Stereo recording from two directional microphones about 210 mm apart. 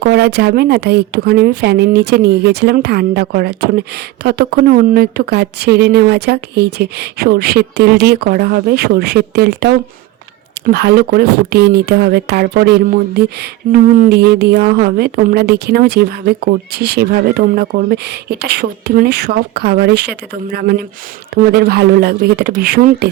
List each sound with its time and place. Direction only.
0.0 s speech: 50° right (ahead or behind)